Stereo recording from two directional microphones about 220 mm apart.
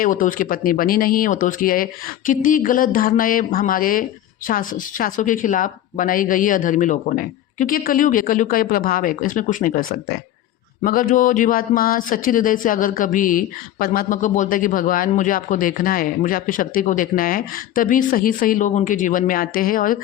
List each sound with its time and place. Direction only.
0.0 s speech: 35° left (ahead or behind)
10.8 s speech: 40° left (ahead or behind)